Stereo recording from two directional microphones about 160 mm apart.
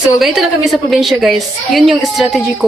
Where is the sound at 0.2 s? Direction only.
Centre (ahead or behind).